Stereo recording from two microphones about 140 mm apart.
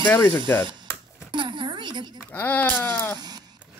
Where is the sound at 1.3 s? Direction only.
35° right (ahead or behind).